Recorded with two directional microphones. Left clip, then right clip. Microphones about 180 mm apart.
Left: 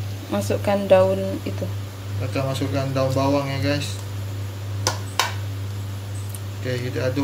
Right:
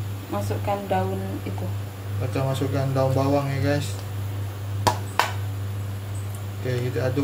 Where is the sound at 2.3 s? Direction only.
5° right (ahead or behind).